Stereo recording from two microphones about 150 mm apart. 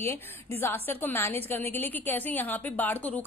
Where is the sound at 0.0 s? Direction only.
15° left (ahead or behind).